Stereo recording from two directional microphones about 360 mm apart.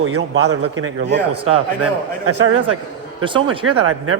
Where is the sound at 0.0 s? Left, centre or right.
Right.